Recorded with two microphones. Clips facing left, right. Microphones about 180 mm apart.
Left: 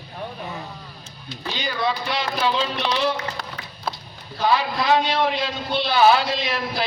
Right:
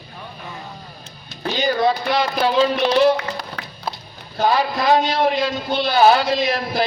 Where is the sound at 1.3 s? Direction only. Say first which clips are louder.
Right 8 dB; 45° right (ahead or behind).